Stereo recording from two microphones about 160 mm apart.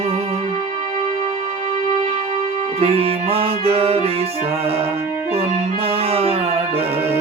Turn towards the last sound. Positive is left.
turn(degrees=-40)  # may be behind; listen again after turning